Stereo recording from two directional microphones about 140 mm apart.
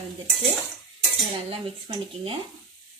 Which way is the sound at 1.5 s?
40° right (ahead or behind).